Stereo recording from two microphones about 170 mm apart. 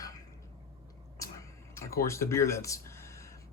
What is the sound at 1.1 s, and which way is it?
Speech, 20° left (ahead or behind).